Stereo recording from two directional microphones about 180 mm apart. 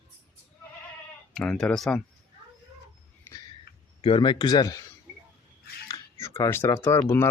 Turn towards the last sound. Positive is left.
turn(degrees=15)  # may be behind; listen again after turning